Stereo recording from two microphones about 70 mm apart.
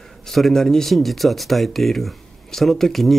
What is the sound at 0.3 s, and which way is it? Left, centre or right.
Speech, centre.